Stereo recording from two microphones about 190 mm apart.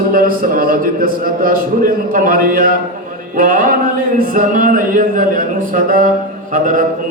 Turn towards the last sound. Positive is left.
turn(degrees=-45)  # may be behind; listen again after turning